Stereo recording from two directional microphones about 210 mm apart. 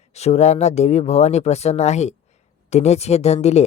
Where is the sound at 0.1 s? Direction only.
30° left (ahead or behind).